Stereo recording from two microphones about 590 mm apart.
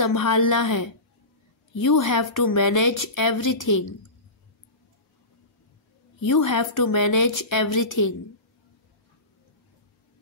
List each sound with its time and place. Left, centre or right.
0.0 s speech: left
6.2 s speech: left